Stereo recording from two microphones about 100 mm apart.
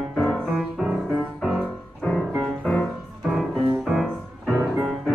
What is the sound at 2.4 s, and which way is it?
Music, 10° left (ahead or behind).